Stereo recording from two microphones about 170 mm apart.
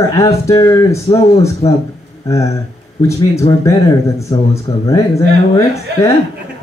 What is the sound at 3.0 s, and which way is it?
Speech, 15° left (ahead or behind).